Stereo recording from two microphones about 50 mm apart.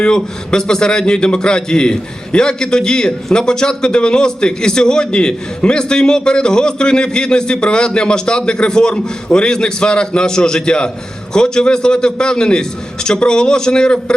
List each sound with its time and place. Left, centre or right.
0.0 s a man's voice: centre